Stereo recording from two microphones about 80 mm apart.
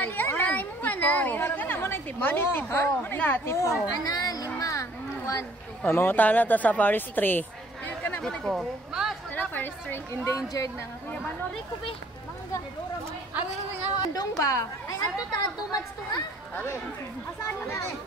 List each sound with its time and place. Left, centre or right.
0.0 s speech: left
3.8 s a woman's voice: left
4.6 s a sound: left
5.9 s speech: left
8.2 s a woman's voice: centre
8.5 s a woman's voice: centre
9.3 s chatter: left
10.2 s a woman's voice: left
13.9 s a woman's voice: left